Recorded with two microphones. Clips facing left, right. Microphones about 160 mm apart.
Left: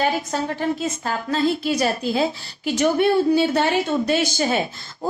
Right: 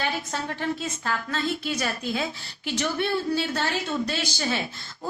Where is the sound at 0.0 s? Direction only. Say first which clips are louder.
Left 7 dB; 45° left (ahead or behind).